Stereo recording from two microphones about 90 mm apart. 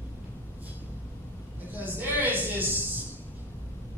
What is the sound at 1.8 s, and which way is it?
Speech, 20° right (ahead or behind).